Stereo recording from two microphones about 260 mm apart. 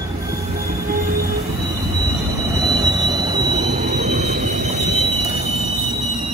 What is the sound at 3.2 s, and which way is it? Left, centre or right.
Train, centre.